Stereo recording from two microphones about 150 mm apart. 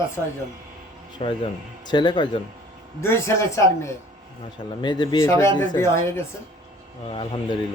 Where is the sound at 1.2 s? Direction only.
35° left (ahead or behind).